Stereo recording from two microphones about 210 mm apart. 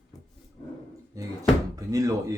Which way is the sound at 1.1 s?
15° right (ahead or behind).